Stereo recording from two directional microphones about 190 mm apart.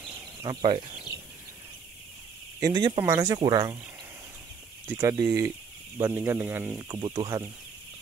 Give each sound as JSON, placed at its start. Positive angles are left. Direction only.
{"t": 0.4, "sound": "speech", "side_deg": -25}
{"t": 2.6, "sound": "speech", "side_deg": -25}
{"t": 4.8, "sound": "speech", "side_deg": -15}